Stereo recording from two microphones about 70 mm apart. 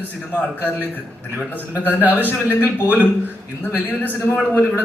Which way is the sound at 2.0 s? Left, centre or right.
Right.